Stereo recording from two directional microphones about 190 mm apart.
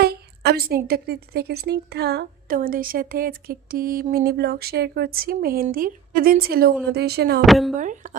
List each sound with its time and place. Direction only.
0.0 s a woman's voice: 55° right (ahead or behind)
7.4 s speech: centre (ahead or behind)
7.8 s speech: 40° right (ahead or behind)